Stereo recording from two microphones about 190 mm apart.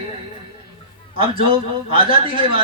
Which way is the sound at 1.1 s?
30° right (ahead or behind).